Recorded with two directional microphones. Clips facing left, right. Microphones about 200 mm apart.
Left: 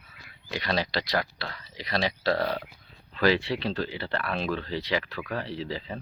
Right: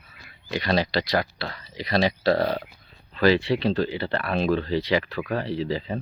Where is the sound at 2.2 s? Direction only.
35° right (ahead or behind).